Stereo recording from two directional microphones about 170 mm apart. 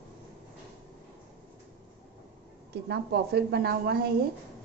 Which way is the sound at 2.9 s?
75° right (ahead or behind).